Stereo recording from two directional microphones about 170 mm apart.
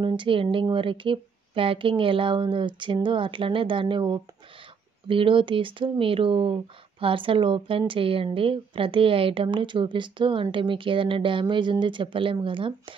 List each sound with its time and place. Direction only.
0.0 s a woman's voice: 30° right (ahead or behind)